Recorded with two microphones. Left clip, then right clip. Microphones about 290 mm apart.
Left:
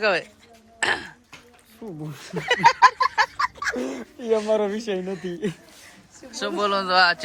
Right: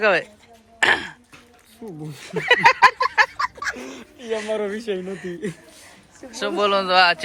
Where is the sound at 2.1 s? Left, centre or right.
Centre.